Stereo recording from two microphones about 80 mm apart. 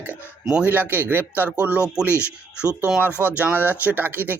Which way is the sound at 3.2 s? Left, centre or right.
Centre.